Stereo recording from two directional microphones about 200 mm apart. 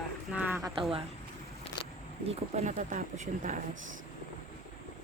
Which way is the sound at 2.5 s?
40° right (ahead or behind).